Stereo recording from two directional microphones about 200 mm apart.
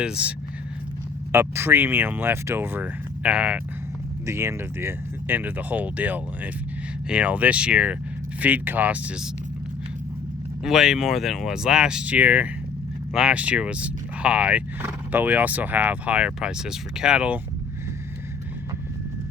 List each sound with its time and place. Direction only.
0.0 s speech: 5° right (ahead or behind)
10.6 s speech: centre (ahead or behind)